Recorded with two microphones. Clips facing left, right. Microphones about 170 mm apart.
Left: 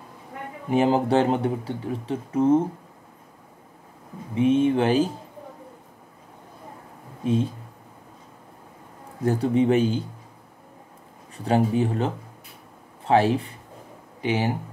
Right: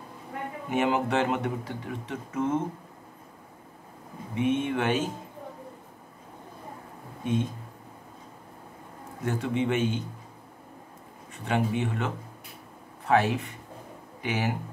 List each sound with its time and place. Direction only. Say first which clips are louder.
0.7 s speech: left 6 dB; 30° left (ahead or behind)
4.4 s speech: left 7 dB; 30° left (ahead or behind)
9.2 s speech: left 7 dB; 35° left (ahead or behind)
11.3 s speech: left 6 dB; 35° left (ahead or behind)